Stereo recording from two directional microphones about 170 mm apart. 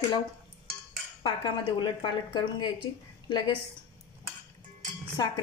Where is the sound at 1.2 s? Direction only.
25° left (ahead or behind).